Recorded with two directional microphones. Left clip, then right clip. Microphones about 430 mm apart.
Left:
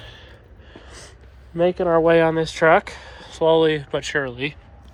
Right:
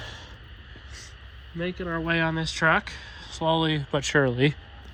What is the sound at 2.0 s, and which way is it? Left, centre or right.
Speech, centre.